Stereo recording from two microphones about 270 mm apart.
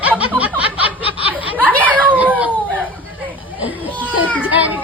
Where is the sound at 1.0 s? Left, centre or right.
Left.